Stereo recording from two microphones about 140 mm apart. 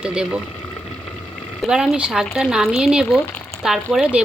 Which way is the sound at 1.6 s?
5° right (ahead or behind).